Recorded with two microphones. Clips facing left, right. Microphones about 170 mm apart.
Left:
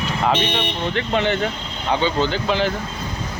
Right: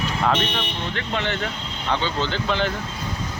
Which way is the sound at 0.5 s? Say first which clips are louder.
Left 5 dB; 20° left (ahead or behind).